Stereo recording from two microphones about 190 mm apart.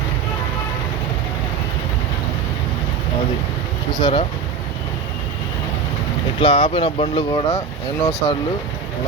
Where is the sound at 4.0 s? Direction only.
25° left (ahead or behind).